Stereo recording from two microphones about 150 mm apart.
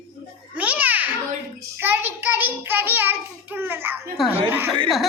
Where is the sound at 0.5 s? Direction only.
10° right (ahead or behind).